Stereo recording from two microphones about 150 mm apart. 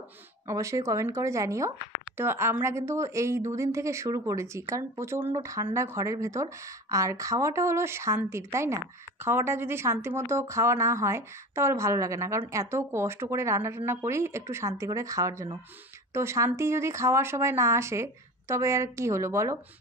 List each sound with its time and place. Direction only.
0.5 s speech: 20° right (ahead or behind)